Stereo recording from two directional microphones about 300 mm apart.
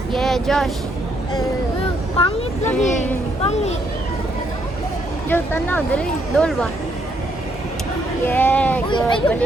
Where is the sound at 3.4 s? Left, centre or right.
Left.